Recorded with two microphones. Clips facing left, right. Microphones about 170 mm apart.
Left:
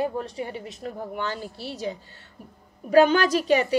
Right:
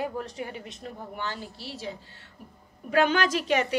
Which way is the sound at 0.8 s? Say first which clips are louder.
Left 5 dB; 45° left (ahead or behind).